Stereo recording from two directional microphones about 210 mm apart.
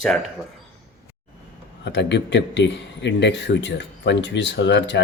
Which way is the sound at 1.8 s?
55° left (ahead or behind).